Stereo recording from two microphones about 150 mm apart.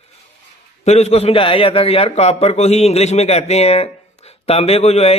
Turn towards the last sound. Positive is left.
turn(degrees=45)  # may be behind; listen again after turning